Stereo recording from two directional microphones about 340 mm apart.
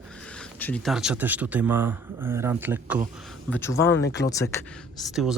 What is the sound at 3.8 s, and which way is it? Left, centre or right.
Speech, left.